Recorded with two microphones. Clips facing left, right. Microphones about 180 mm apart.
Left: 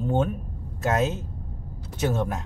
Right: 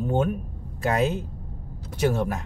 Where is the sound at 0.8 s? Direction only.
15° right (ahead or behind).